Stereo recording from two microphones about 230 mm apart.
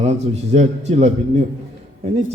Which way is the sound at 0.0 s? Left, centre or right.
Right.